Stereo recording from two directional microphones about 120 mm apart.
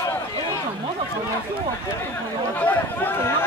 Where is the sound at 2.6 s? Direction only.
15° left (ahead or behind).